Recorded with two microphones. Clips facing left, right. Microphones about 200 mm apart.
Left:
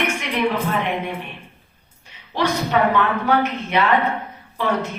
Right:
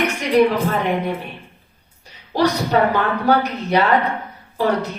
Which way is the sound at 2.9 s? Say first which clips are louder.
Right 1 dB; 35° right (ahead or behind).